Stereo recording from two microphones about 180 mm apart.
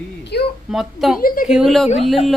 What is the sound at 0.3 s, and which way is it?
Speech, 65° left (ahead or behind).